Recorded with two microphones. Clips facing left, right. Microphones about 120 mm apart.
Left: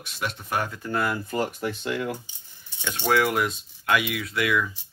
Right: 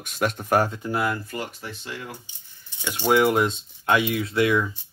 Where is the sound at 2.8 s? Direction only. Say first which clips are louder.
Right 3 dB; 10° right (ahead or behind); by 4.7 s 30° right (ahead or behind).